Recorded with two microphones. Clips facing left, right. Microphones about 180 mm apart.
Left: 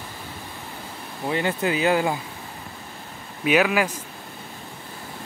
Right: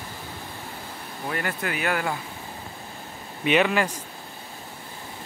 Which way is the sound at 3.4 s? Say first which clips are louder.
Left 1 dB; 5° left (ahead or behind).